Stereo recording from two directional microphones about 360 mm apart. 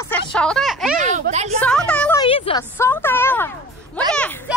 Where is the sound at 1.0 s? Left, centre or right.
Centre.